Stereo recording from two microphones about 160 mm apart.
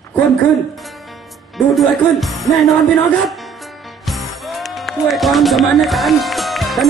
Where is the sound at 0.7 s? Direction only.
Centre (ahead or behind).